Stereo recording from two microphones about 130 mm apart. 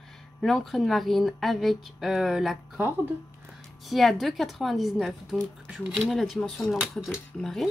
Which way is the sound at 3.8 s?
Centre (ahead or behind).